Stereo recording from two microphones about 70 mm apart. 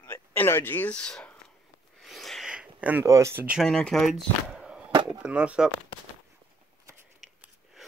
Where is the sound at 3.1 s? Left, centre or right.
Right.